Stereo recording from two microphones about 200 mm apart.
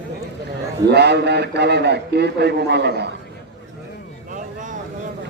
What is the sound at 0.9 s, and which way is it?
A man's voice, 55° right (ahead or behind).